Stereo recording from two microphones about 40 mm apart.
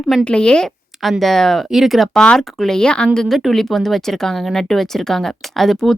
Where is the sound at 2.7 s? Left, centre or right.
Left.